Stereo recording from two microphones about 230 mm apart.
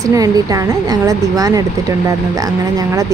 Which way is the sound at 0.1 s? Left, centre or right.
Centre.